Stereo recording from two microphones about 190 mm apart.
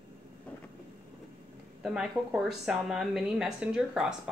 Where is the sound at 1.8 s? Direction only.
5° right (ahead or behind).